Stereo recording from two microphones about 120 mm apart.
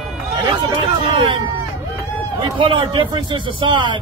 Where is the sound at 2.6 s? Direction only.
45° right (ahead or behind).